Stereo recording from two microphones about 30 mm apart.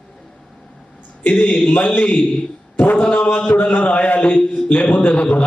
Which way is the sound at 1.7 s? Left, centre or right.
Left.